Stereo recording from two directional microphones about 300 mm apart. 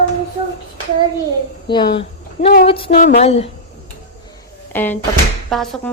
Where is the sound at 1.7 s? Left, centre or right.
Centre.